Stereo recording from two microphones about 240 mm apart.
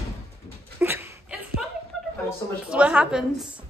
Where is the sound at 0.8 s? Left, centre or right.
Centre.